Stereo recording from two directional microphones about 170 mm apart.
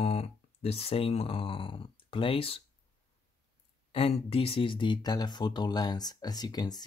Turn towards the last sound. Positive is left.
turn(degrees=25)  # may be behind; listen again after turning